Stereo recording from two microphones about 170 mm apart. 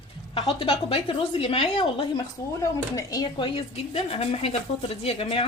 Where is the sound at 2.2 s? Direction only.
20° left (ahead or behind).